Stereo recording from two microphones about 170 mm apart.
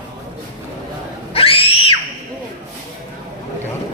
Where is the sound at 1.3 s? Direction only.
35° left (ahead or behind).